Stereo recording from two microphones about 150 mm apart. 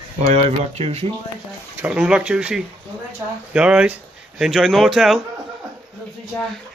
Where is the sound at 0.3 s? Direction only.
45° right (ahead or behind).